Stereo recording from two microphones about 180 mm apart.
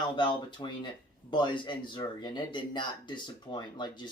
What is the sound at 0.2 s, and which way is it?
Speech, 25° left (ahead or behind).